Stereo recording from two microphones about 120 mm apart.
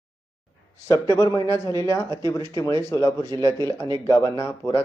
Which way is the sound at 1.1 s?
25° left (ahead or behind).